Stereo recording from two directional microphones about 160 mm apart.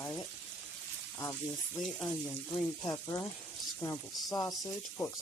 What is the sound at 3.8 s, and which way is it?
Speech, 20° left (ahead or behind).